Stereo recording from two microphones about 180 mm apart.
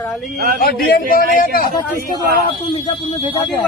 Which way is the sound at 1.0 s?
50° right (ahead or behind).